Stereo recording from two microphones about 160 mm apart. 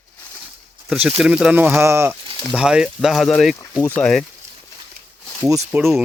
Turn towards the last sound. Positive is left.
turn(degrees=-15)  # may be behind; listen again after turning